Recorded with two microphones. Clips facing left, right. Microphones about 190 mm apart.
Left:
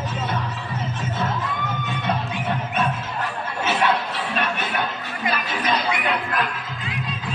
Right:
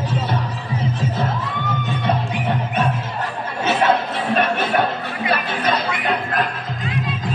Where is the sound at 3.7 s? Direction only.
45° right (ahead or behind).